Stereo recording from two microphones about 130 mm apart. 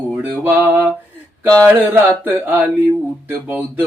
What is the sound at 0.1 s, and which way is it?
Mantra, 15° right (ahead or behind).